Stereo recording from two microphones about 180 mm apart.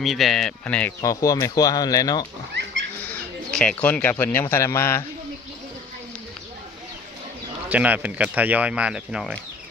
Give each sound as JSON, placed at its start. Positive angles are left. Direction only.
{"t": 0.0, "sound": "speech", "side_deg": 0}
{"t": 3.0, "sound": "speech", "side_deg": 10}
{"t": 7.7, "sound": "speech", "side_deg": -10}